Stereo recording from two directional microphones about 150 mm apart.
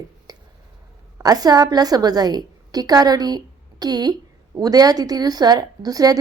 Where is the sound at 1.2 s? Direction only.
25° right (ahead or behind).